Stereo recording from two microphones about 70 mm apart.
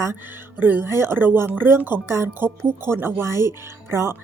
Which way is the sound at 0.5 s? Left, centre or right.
Right.